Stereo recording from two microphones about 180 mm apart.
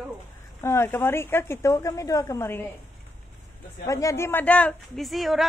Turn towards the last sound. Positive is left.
turn(degrees=0)  # may be behind; listen again after turning